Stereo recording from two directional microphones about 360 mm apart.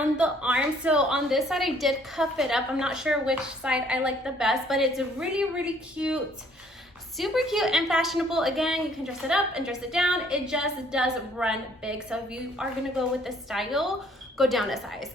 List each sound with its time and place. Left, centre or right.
0.0 s a woman's voice: centre
7.2 s a woman's voice: centre